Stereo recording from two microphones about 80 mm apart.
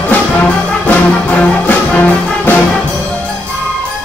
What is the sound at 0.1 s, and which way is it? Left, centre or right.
Music, centre.